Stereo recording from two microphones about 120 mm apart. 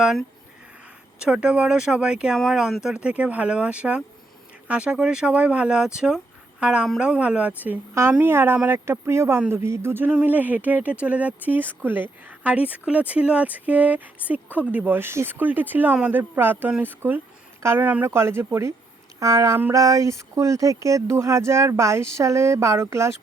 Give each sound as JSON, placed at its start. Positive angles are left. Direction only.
{"t": 0.0, "sound": "a woman's voice", "side_deg": -5}